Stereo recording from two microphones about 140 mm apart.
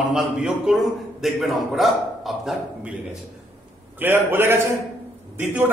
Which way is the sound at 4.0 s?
15° right (ahead or behind).